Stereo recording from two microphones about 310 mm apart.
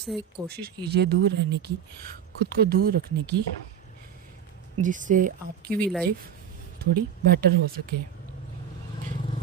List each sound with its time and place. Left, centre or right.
0.1 s speech: centre
0.4 s speech: right
4.8 s speech: right
5.6 s speech: centre
6.9 s speech: right